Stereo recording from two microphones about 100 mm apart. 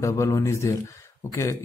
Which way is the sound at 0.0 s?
30° left (ahead or behind).